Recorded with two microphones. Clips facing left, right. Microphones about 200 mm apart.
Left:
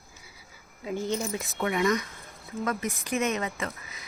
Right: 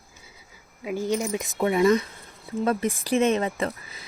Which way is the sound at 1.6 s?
30° right (ahead or behind).